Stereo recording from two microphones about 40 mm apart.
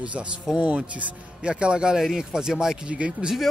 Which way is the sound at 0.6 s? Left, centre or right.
Right.